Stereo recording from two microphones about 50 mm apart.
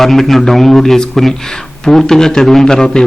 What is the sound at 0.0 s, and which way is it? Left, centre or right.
A man's voice, centre.